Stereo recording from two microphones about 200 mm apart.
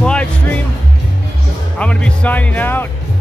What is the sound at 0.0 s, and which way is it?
Music, 5° left (ahead or behind).